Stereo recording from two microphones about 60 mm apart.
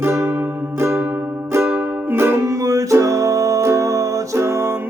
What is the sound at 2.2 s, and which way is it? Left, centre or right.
Music, right.